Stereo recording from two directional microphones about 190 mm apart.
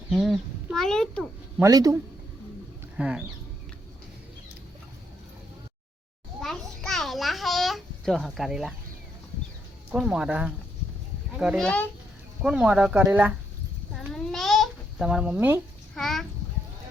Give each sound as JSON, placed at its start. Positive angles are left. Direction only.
{"t": 0.1, "sound": "a child's voice", "side_deg": 0}
{"t": 1.5, "sound": "speech", "side_deg": -20}
{"t": 3.0, "sound": "speech", "side_deg": -5}
{"t": 6.4, "sound": "a sound", "side_deg": 0}
{"t": 9.9, "sound": "speech", "side_deg": -5}
{"t": 13.9, "sound": "babbling", "side_deg": 0}
{"t": 16.0, "sound": "speech", "side_deg": 0}